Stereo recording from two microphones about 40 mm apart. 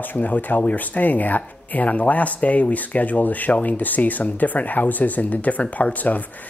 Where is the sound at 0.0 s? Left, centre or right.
Left.